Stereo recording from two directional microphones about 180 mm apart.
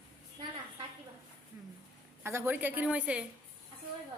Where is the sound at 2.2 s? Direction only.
10° right (ahead or behind).